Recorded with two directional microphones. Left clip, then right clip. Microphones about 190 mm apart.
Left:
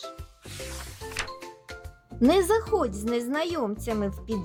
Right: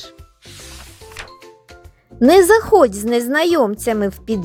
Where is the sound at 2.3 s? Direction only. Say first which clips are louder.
Right 13 dB; 35° right (ahead or behind).